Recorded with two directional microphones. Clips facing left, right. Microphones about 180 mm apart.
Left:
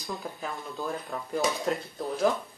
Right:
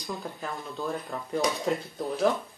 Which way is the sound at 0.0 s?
Centre (ahead or behind).